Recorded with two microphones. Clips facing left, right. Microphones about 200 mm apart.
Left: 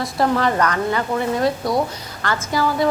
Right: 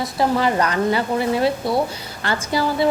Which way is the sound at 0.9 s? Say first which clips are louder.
Right 1 dB; 30° right (ahead or behind).